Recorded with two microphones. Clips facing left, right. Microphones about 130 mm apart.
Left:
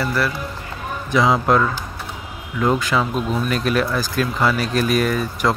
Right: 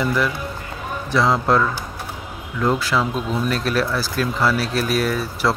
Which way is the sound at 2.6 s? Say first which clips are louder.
Left 1 dB; centre (ahead or behind).